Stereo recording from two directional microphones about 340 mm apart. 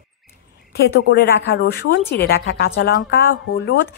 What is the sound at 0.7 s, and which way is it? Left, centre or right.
Speech, left.